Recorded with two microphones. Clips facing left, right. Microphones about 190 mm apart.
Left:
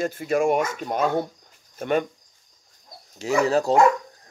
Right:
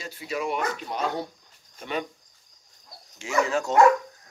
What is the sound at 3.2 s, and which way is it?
Speech, 35° left (ahead or behind).